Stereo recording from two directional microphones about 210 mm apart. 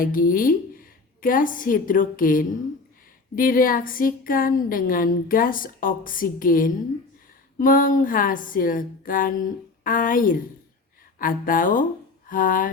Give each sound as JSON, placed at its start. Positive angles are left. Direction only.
{"t": 0.0, "sound": "a woman's voice", "side_deg": 40}